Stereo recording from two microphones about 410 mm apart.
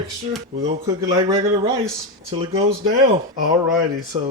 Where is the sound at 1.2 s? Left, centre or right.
Centre.